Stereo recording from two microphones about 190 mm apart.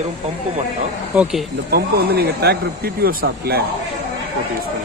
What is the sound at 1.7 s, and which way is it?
Speech, 55° right (ahead or behind).